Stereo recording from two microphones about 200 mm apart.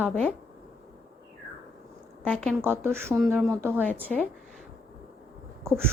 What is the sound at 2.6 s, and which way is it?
Speech, 10° right (ahead or behind).